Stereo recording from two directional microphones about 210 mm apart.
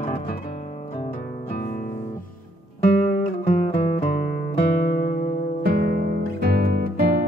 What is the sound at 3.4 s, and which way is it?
Music, 35° left (ahead or behind).